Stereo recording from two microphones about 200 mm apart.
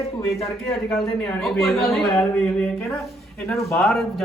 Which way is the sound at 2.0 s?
15° left (ahead or behind).